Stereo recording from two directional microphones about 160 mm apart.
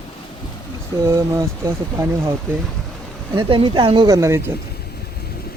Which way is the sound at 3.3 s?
35° right (ahead or behind).